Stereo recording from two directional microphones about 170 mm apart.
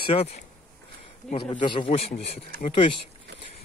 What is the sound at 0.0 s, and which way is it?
A man's voice, 35° left (ahead or behind).